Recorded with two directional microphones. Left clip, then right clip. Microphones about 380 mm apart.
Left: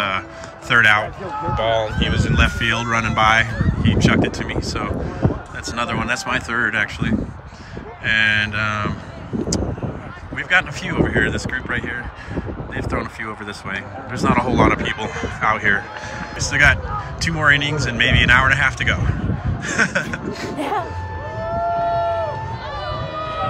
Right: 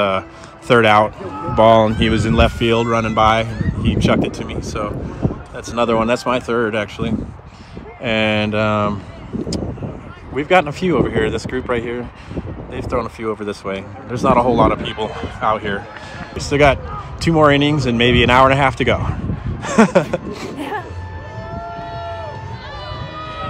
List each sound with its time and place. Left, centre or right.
0.7 s speech: centre
10.3 s speech: centre
16.3 s speech: centre
20.5 s music: centre
21.4 s run: centre